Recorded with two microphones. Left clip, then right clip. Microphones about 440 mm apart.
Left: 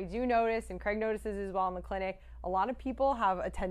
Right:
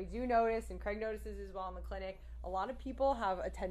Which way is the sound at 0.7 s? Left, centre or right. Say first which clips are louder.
Left 7 dB; left.